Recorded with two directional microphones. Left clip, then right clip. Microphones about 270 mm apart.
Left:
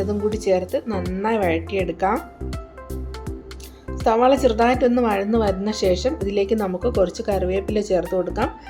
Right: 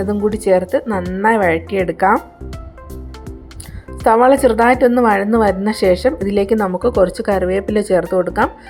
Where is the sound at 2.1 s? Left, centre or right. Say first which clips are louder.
Right 7 dB; centre.